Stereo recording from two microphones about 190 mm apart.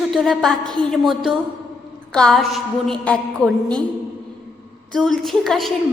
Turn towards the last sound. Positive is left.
turn(degrees=0)  # may be behind; listen again after turning